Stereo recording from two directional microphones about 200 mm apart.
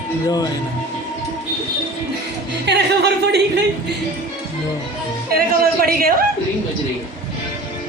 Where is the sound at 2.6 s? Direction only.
55° right (ahead or behind).